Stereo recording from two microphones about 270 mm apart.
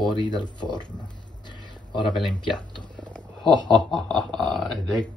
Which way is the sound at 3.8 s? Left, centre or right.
Centre.